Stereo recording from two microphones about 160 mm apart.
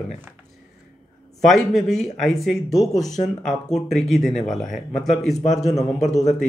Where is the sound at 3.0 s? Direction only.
45° left (ahead or behind).